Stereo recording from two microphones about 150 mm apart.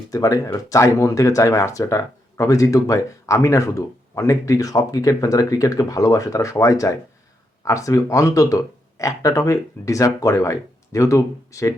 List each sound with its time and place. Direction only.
0.1 s speech: 25° left (ahead or behind)